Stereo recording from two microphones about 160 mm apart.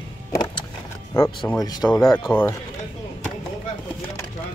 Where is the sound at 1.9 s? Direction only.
Centre (ahead or behind).